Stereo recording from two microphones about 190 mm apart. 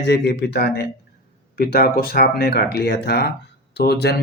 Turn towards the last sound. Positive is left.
turn(degrees=55)  # may be behind; listen again after turning